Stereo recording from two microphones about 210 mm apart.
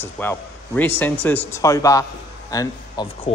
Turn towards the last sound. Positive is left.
turn(degrees=15)  # may be behind; listen again after turning